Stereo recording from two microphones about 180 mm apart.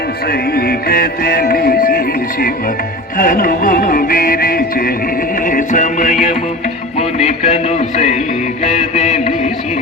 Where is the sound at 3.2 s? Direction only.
50° left (ahead or behind).